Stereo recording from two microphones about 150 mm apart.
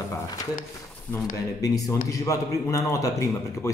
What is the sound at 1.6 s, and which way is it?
A man's voice, 25° left (ahead or behind).